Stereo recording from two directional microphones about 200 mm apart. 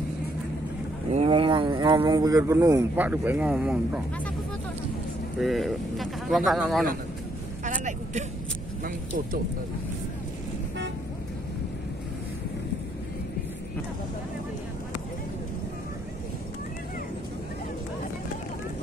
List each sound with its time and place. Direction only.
1.1 s speech: 30° right (ahead or behind); by 4.0 s 5° right (ahead or behind)
5.4 s speech: centre (ahead or behind)
7.6 s vehicle: 40° right (ahead or behind)